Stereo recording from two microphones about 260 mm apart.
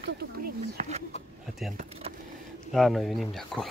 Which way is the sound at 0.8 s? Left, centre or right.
Right.